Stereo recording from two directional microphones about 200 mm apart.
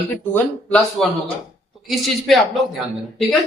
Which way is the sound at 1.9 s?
Centre (ahead or behind).